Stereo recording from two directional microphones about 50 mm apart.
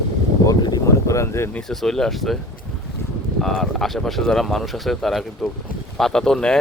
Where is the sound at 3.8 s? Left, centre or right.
Centre.